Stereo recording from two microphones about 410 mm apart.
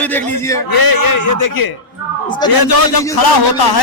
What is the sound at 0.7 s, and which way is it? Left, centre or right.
A man's voice, left.